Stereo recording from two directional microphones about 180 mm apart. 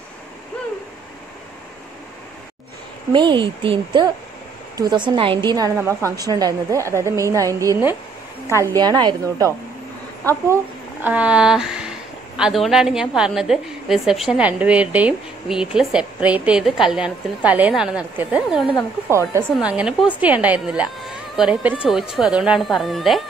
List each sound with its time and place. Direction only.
3.1 s a woman's voice: 25° right (ahead or behind)
10.2 s a woman's voice: 15° right (ahead or behind)